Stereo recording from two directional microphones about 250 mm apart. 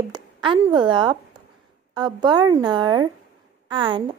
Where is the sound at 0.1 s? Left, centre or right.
Centre.